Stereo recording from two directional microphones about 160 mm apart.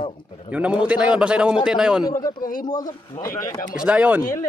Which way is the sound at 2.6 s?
25° left (ahead or behind).